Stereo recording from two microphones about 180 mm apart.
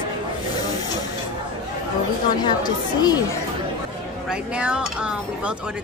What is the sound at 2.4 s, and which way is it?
Speech, 20° left (ahead or behind).